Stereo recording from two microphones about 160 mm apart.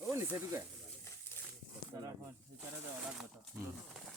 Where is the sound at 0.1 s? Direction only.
15° right (ahead or behind).